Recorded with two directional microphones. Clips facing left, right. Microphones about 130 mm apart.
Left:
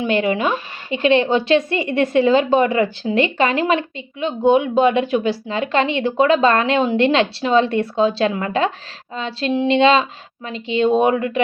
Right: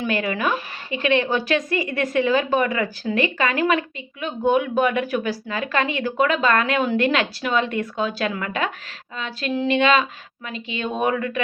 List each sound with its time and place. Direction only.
0.0 s speech: 25° left (ahead or behind)